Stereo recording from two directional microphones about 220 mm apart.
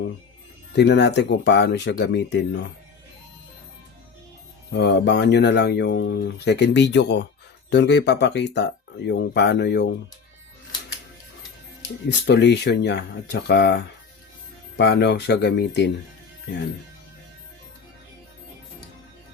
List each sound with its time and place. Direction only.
0.8 s speech: 50° left (ahead or behind)
4.7 s speech: 50° left (ahead or behind)
12.0 s speech: 50° left (ahead or behind)